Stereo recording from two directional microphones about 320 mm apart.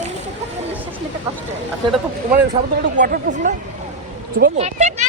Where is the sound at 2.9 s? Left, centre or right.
Right.